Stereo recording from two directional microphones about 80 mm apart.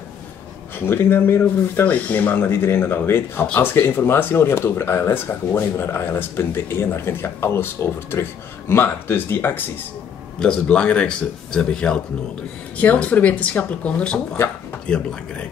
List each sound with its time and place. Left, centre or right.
0.7 s speech: left
3.7 s speech: left
10.4 s speech: centre